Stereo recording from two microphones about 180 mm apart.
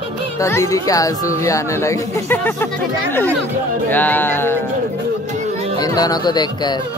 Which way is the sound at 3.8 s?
10° left (ahead or behind).